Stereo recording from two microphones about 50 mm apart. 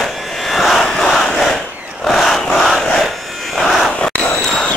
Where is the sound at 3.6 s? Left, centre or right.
Centre.